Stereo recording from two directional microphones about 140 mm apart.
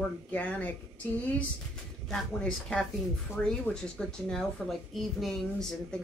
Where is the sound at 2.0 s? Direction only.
5° left (ahead or behind).